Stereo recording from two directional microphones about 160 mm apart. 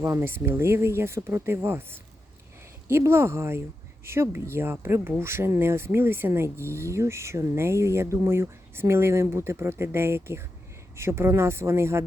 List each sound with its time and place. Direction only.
0.0 s speech: 15° right (ahead or behind)